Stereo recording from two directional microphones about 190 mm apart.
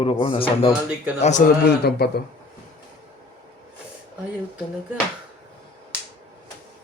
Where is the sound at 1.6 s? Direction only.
55° left (ahead or behind).